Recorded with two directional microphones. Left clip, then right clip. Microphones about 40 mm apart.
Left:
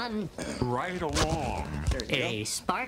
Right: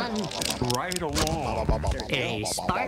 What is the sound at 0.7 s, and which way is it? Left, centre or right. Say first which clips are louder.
Speech: right 2 dB; left.